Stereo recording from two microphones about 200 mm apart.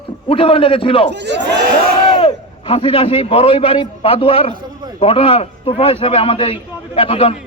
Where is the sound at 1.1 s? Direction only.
60° right (ahead or behind).